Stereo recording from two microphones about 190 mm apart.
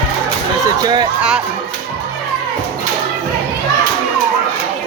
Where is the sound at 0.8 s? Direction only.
20° right (ahead or behind).